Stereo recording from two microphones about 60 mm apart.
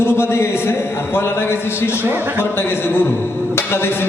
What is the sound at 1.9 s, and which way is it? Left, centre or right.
Speech, right.